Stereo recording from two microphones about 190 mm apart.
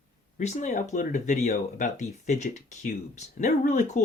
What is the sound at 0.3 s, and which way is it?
Speech, 40° left (ahead or behind).